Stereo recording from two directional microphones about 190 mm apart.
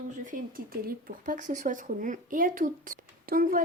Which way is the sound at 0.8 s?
40° right (ahead or behind).